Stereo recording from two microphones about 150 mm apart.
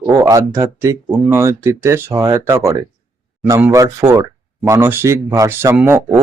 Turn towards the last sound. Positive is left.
turn(degrees=-15)  # may be behind; listen again after turning